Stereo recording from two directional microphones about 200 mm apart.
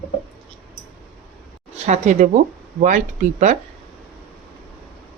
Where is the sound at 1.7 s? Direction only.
35° right (ahead or behind).